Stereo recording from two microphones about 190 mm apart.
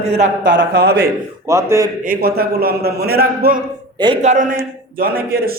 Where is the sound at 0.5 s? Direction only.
55° right (ahead or behind).